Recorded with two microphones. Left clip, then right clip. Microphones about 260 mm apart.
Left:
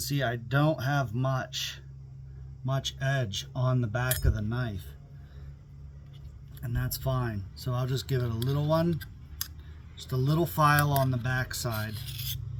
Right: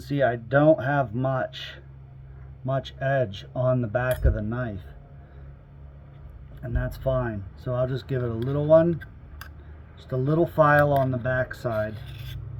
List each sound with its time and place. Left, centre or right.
0.0 s speech: left
2.6 s speech: left
6.6 s speech: left
10.1 s speech: left
11.9 s filing: centre